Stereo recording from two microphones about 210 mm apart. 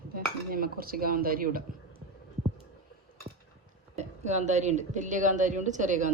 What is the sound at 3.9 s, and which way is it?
A woman's voice, 35° right (ahead or behind).